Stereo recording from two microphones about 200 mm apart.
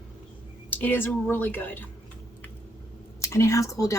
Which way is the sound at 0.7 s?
10° left (ahead or behind).